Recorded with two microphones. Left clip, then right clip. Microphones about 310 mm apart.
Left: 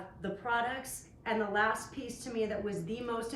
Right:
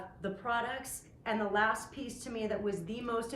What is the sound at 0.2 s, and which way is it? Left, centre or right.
A woman's voice, centre.